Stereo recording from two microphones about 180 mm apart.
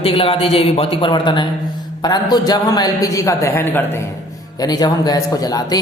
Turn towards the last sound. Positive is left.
turn(degrees=20)  # may be behind; listen again after turning